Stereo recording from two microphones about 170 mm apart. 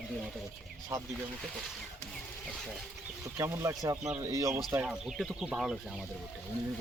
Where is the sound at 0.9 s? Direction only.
15° right (ahead or behind).